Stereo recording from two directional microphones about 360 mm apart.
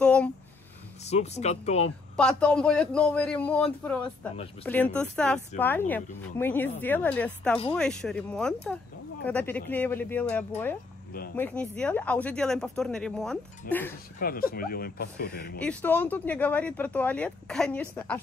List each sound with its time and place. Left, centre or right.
0.0 s a sound: centre
1.0 s speech: centre
2.1 s speech: centre
14.2 s speech: left
15.6 s speech: centre